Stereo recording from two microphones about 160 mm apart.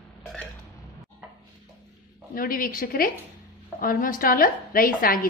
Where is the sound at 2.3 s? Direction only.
60° left (ahead or behind).